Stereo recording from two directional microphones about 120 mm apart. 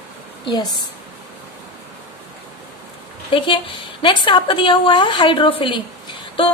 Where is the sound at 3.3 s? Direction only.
45° left (ahead or behind).